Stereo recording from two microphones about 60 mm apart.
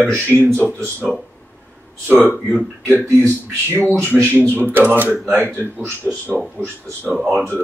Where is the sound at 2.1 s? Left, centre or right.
Left.